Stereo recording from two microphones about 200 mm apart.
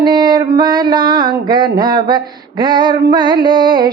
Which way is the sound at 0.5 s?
20° right (ahead or behind).